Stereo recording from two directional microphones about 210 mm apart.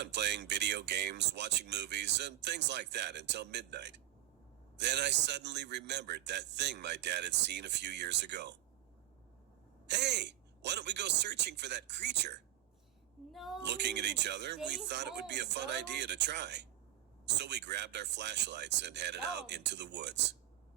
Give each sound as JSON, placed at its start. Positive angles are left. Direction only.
{"t": 0.0, "sound": "speech", "side_deg": -55}
{"t": 9.8, "sound": "speech", "side_deg": -55}
{"t": 13.3, "sound": "a sound", "side_deg": 0}
{"t": 13.7, "sound": "speech", "side_deg": -55}